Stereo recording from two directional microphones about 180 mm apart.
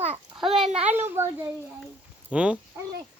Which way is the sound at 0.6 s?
5° right (ahead or behind).